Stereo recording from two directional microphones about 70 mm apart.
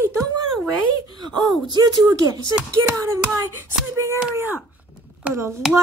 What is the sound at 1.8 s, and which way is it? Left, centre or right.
Speech, right.